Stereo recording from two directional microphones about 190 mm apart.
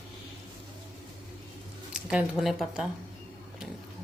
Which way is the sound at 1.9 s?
5° right (ahead or behind).